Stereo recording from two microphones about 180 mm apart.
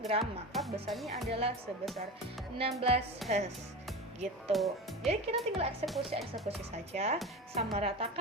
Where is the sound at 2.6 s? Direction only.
35° right (ahead or behind).